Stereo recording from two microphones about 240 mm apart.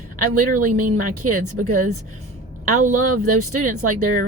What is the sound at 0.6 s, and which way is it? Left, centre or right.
Speech, right.